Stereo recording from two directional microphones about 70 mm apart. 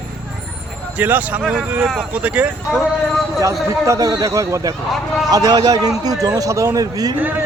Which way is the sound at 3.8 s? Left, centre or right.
Right.